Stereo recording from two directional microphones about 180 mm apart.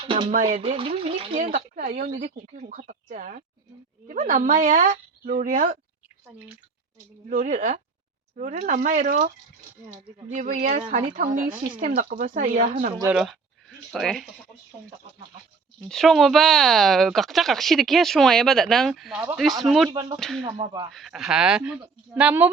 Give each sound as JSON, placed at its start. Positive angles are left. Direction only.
{"t": 0.0, "sound": "speech", "side_deg": -30}
{"t": 0.3, "sound": "speech", "side_deg": -45}
{"t": 0.6, "sound": "speech", "side_deg": -30}
{"t": 1.5, "sound": "speech", "side_deg": -45}
{"t": 7.3, "sound": "speech", "side_deg": -45}
{"t": 10.3, "sound": "speech", "side_deg": -45}
{"t": 13.1, "sound": "speech", "side_deg": 0}
{"t": 15.8, "sound": "speech", "side_deg": 0}
{"t": 19.9, "sound": "speech", "side_deg": -25}
{"t": 20.1, "sound": "speech", "side_deg": 0}